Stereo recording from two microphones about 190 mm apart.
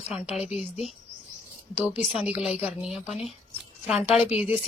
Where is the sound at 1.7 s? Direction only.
5° right (ahead or behind).